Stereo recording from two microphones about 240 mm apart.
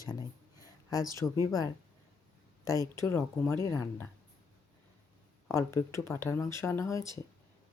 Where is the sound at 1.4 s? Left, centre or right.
Centre.